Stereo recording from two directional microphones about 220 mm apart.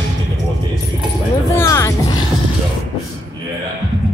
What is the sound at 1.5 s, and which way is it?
Music, 15° left (ahead or behind).